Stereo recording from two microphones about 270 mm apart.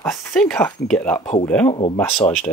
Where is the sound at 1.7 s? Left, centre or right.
Left.